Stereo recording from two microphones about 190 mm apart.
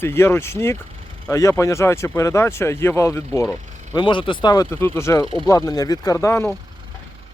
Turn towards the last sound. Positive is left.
turn(degrees=15)  # may be behind; listen again after turning